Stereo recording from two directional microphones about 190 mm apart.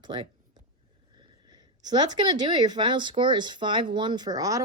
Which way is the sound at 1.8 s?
20° right (ahead or behind).